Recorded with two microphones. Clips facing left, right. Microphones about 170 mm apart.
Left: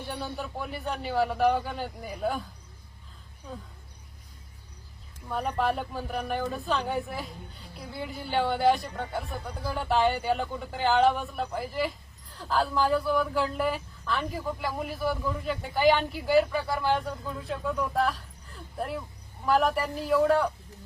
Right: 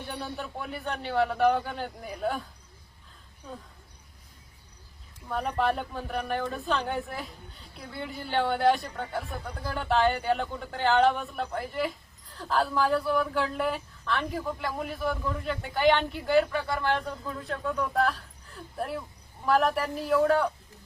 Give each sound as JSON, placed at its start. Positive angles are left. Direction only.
{"t": 0.0, "sound": "speech", "side_deg": 0}
{"t": 5.3, "sound": "speech", "side_deg": 0}